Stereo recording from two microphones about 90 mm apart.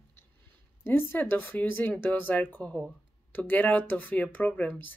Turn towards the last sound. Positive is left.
turn(degrees=20)  # may be behind; listen again after turning